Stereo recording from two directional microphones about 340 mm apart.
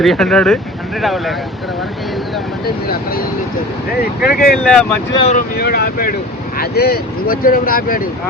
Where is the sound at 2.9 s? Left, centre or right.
Left.